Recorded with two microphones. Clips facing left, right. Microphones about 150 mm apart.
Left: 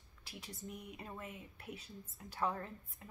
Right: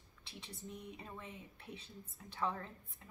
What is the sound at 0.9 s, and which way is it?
A woman's voice, 5° left (ahead or behind).